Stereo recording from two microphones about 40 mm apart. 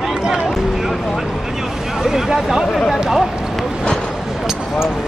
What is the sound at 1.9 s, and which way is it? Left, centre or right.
Vehicle, centre.